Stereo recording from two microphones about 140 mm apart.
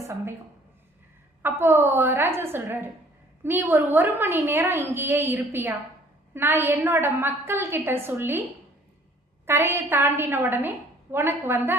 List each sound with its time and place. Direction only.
0.0 s speech: 20° right (ahead or behind)
1.4 s a woman's voice: 15° right (ahead or behind)
9.5 s a woman's voice: 15° right (ahead or behind)